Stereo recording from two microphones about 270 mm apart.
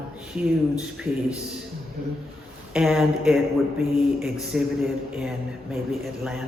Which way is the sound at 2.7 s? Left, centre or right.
Centre.